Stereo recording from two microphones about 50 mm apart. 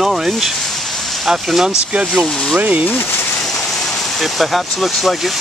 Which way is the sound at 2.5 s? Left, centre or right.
Right.